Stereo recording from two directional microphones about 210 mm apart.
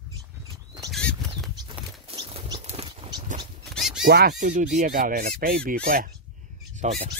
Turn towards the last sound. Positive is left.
turn(degrees=-35)  # may be behind; listen again after turning